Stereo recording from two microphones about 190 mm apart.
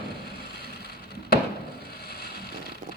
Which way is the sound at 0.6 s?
55° left (ahead or behind).